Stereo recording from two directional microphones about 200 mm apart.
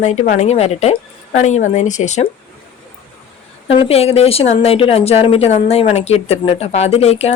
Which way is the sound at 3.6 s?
30° left (ahead or behind).